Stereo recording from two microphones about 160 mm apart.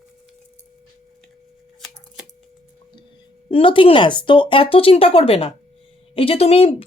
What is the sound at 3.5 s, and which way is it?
Speech, 35° left (ahead or behind).